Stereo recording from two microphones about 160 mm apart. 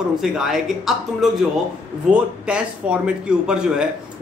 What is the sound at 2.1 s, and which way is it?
A man's voice, 5° right (ahead or behind).